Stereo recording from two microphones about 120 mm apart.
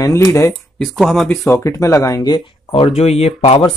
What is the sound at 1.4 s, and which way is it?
Speech, 25° left (ahead or behind).